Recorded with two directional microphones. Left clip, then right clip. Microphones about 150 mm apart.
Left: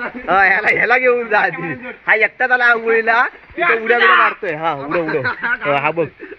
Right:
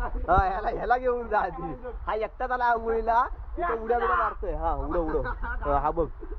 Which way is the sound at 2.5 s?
25° left (ahead or behind).